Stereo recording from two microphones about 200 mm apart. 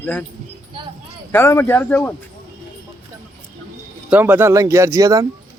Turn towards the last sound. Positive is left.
turn(degrees=-15)  # may be behind; listen again after turning